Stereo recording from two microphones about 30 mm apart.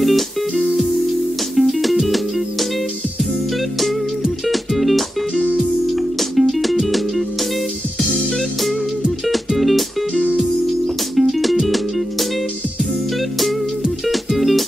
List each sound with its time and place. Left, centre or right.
0.0 s music: centre
4.5 s music: centre
9.6 s music: centre
10.1 s music: right
11.1 s music: centre
14.0 s music: centre